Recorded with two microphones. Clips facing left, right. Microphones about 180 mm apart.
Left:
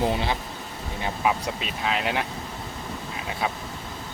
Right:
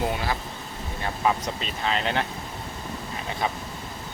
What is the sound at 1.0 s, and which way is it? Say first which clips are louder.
Speech: even; 10° left (ahead or behind).